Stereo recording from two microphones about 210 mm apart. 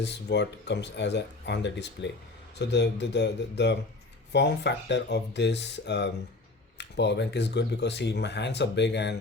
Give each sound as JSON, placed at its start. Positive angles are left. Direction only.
{"t": 0.0, "sound": "speech", "side_deg": 55}